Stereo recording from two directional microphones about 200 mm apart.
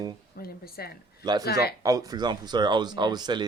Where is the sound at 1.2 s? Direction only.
20° right (ahead or behind).